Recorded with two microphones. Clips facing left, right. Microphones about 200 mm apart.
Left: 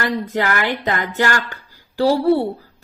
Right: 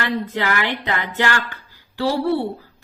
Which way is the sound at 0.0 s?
40° left (ahead or behind).